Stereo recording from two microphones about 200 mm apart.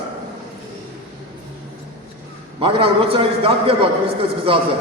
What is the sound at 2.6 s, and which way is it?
A man's voice, 30° right (ahead or behind).